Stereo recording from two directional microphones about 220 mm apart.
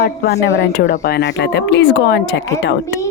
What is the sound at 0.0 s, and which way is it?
Speech, 50° left (ahead or behind).